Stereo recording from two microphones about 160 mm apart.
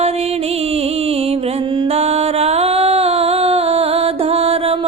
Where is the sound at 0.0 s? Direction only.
40° right (ahead or behind).